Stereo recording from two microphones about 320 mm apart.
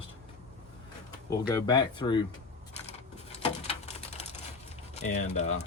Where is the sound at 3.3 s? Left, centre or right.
Centre.